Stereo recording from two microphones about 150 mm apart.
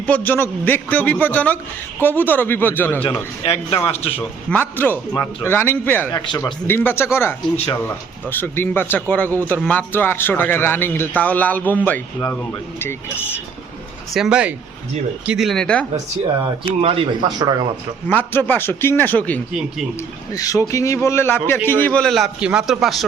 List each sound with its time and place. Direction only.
0.0 s a man's voice: 10° left (ahead or behind)
3.0 s a man's voice: 40° left (ahead or behind)
4.2 s a man's voice: 10° left (ahead or behind)
7.5 s a man's voice: 40° left (ahead or behind)
7.9 s a man's voice: 15° left (ahead or behind)
14.1 s a man's voice: 5° right (ahead or behind)
16.8 s a man's voice: 40° right (ahead or behind)
18.1 s a man's voice: 15° left (ahead or behind)
20.3 s a man's voice: 20° left (ahead or behind); by 23.0 s centre (ahead or behind)